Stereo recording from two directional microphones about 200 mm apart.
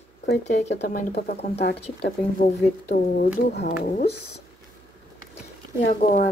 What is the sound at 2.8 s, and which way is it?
Speech, 50° left (ahead or behind).